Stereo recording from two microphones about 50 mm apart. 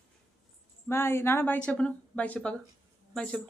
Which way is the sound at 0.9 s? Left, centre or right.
Left.